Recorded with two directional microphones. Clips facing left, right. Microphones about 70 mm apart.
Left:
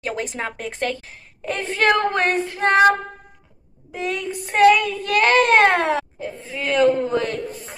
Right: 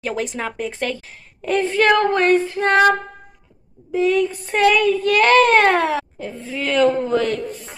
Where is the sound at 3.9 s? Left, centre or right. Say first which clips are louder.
Right 8 dB; left.